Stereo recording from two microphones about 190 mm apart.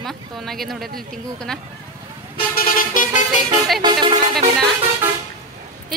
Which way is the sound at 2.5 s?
45° left (ahead or behind).